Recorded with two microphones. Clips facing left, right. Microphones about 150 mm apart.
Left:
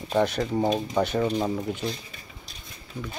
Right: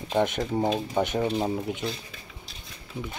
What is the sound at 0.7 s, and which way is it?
Speech, 20° right (ahead or behind).